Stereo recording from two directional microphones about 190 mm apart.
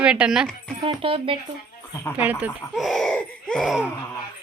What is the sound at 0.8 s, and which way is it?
Speech, 25° right (ahead or behind).